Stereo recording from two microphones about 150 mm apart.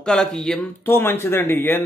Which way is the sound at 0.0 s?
5° left (ahead or behind).